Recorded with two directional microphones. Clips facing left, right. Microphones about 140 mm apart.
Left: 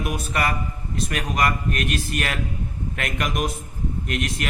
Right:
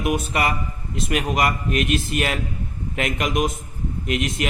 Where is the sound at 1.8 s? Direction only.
45° left (ahead or behind).